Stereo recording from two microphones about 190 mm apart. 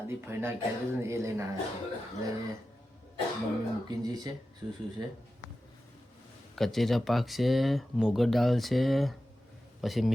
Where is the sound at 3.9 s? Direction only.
20° right (ahead or behind).